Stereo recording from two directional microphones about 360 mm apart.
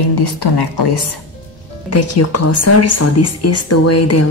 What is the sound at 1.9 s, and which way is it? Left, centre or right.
Speech, left.